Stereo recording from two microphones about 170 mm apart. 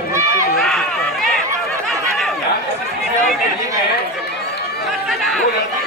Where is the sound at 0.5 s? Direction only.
Centre (ahead or behind).